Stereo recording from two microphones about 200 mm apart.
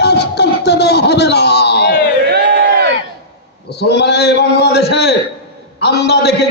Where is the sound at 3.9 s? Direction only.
55° left (ahead or behind).